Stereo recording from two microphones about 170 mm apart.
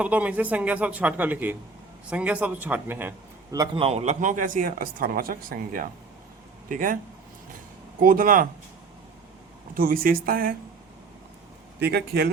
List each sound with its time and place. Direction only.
0.0 s a man's voice: 10° right (ahead or behind)
3.8 s speech: 35° right (ahead or behind); by 7.0 s 55° right (ahead or behind)
8.0 s a woman's voice: 55° right (ahead or behind)
9.7 s a woman's voice: 60° right (ahead or behind)
11.8 s a man's voice: 70° right (ahead or behind)